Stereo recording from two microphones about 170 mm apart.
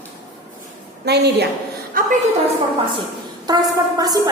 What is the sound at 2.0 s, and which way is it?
Speech, 55° right (ahead or behind).